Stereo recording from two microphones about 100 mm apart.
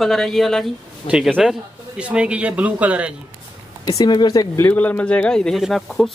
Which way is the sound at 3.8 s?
40° left (ahead or behind).